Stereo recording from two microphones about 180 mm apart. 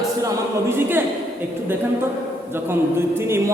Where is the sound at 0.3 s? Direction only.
10° right (ahead or behind).